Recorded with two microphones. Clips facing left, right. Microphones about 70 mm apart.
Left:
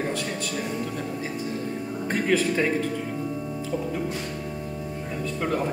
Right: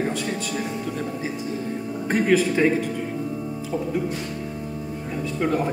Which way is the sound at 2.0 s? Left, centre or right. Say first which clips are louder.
Right 4 dB; centre.